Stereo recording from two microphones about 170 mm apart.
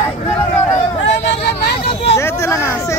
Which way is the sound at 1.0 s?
85° left.